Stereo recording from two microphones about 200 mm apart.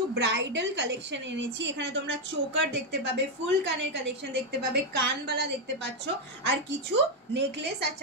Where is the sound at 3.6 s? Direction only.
60° right (ahead or behind).